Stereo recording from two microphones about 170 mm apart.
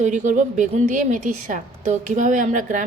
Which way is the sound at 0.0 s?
45° right (ahead or behind).